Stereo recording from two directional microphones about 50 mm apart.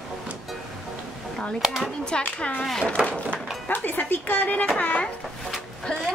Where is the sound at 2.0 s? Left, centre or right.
Left.